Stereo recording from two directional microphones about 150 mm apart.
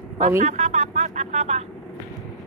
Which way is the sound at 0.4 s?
50° right (ahead or behind).